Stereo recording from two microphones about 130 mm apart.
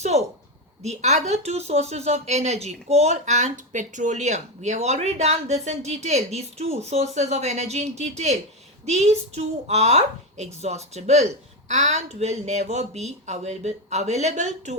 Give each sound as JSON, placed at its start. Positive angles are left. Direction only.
{"t": 0.0, "sound": "a woman's voice", "side_deg": -55}